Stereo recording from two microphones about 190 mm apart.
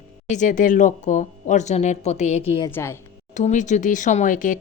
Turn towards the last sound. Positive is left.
turn(degrees=45)  # may be behind; listen again after turning